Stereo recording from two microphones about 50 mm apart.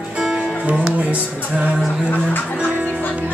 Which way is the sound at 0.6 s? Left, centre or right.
Right.